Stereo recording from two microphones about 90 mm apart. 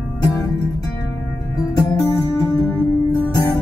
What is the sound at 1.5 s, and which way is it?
Music, 45° left (ahead or behind).